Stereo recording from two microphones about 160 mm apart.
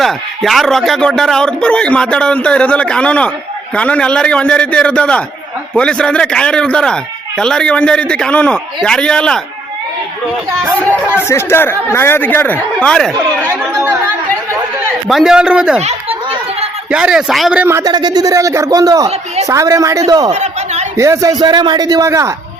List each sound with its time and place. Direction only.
0.0 s speech: centre (ahead or behind)
10.8 s speech: 10° left (ahead or behind)
13.5 s chatter: 15° right (ahead or behind)
15.0 s speech: 5° right (ahead or behind)
15.8 s chatter: 40° right (ahead or behind)
16.9 s speech: 5° right (ahead or behind); by 20.3 s 25° right (ahead or behind)
20.3 s a sound: 45° right (ahead or behind)
20.9 s speech: 20° right (ahead or behind)